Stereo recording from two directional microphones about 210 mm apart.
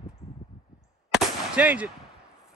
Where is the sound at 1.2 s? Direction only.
5° right (ahead or behind).